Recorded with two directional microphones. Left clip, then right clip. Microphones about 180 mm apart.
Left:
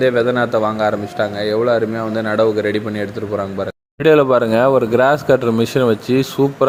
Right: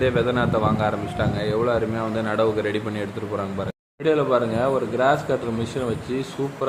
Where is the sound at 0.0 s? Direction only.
30° left (ahead or behind).